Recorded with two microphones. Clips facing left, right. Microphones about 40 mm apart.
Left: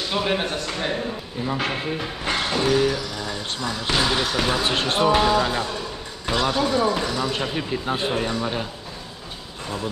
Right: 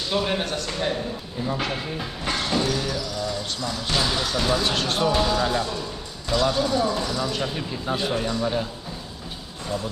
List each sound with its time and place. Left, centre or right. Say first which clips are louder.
0.1 s a man's voice: left 1 dB; centre